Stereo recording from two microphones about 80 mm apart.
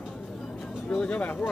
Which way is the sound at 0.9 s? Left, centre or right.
Centre.